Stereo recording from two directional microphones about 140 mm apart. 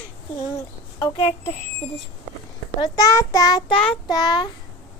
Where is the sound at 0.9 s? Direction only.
30° left (ahead or behind).